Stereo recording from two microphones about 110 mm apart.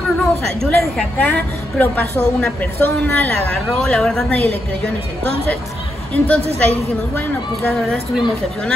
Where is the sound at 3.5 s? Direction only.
5° left (ahead or behind).